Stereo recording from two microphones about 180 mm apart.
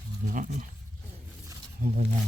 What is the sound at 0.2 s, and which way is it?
Speech, 45° right (ahead or behind).